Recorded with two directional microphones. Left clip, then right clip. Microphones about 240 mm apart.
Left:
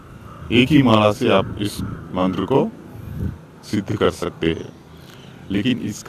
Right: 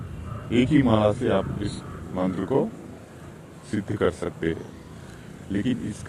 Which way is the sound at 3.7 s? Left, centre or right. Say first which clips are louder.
Left 5 dB; centre.